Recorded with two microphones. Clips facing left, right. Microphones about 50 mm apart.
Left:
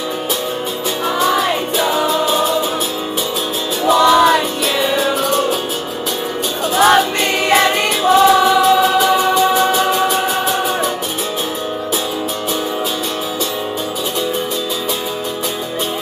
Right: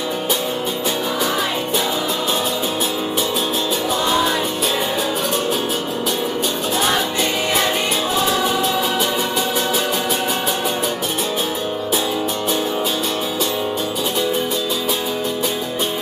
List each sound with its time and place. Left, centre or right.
3.8 s music: left
6.8 s music: left
9.3 s music: centre